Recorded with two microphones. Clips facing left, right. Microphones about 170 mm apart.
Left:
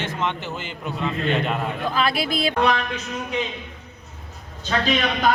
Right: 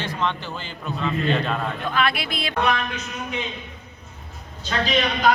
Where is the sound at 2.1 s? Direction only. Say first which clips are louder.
Left 4 dB; 35° left (ahead or behind).